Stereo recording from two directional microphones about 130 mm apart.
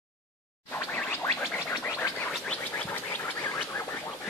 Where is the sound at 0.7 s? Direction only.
15° left (ahead or behind).